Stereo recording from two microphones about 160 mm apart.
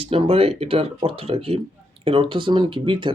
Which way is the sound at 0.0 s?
35° right (ahead or behind).